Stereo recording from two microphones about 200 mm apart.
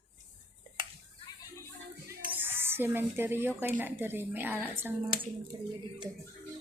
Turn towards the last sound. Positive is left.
turn(degrees=-10)  # may be behind; listen again after turning